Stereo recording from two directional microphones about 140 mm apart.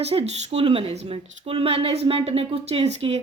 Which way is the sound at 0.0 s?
45° right (ahead or behind).